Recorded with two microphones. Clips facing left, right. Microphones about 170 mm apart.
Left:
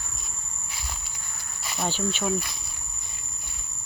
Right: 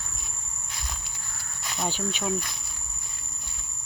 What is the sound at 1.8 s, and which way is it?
Cricket, 10° right (ahead or behind).